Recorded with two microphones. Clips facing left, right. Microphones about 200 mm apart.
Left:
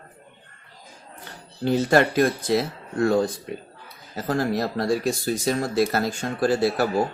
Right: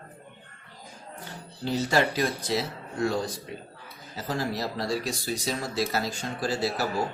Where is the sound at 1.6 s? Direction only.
55° left (ahead or behind).